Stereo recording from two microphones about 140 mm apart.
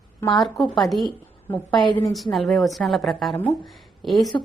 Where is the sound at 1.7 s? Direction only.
35° left (ahead or behind).